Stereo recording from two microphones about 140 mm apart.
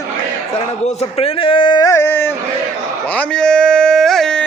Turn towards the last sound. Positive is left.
turn(degrees=5)  # may be behind; listen again after turning